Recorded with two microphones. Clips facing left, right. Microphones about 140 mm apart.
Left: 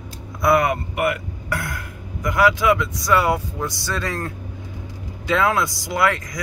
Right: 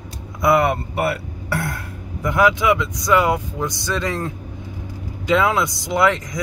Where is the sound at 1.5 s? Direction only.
30° right (ahead or behind).